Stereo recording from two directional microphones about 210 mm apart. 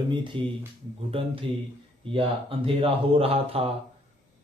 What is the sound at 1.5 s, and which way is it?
Speech, 25° right (ahead or behind).